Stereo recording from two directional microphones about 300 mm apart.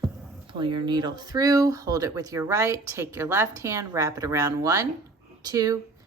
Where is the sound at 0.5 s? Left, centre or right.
Centre.